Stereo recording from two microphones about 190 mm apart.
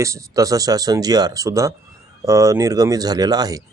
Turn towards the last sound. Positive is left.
turn(degrees=-20)  # may be behind; listen again after turning